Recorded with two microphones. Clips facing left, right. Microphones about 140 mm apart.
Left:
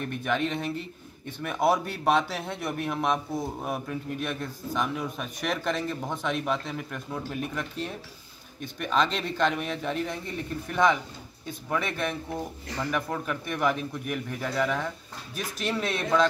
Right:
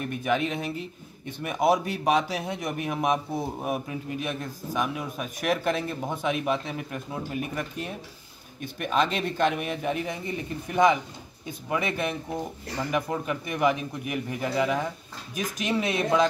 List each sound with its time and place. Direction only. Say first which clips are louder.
0.0 s a man's voice: right 2 dB; 5° right (ahead or behind)